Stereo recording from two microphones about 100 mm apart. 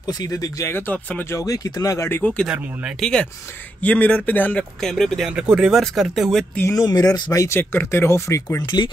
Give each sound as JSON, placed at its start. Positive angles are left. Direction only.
{"t": 0.0, "sound": "speech", "side_deg": 40}
{"t": 0.7, "sound": "speech", "side_deg": 20}
{"t": 1.3, "sound": "speech", "side_deg": 35}
{"t": 2.0, "sound": "speech", "side_deg": 20}
{"t": 2.4, "sound": "speech", "side_deg": -10}
{"t": 3.0, "sound": "speech", "side_deg": 5}
{"t": 4.8, "sound": "speech", "side_deg": 5}
{"t": 6.7, "sound": "speech", "side_deg": 40}
{"t": 7.3, "sound": "speech", "side_deg": 25}